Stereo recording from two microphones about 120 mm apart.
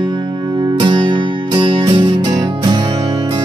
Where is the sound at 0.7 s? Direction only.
40° right (ahead or behind).